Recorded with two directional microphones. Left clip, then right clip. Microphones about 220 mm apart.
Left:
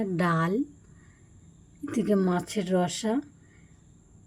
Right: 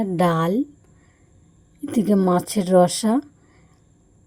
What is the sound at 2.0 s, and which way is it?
A woman's voice, 20° right (ahead or behind).